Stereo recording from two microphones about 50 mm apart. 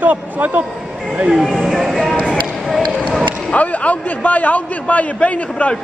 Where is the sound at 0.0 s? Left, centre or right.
Right.